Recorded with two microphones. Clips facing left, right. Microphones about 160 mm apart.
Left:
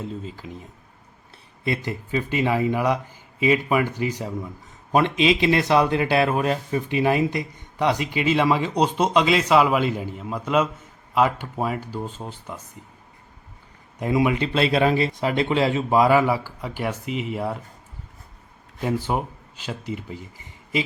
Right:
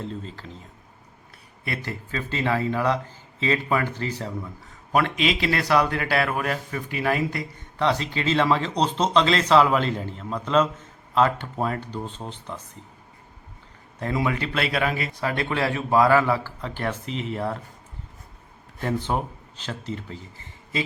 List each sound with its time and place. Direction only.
0.0 s speech: 5° left (ahead or behind)
1.6 s speech: 20° left (ahead or behind)
14.0 s speech: 15° left (ahead or behind)
18.8 s speech: 10° left (ahead or behind)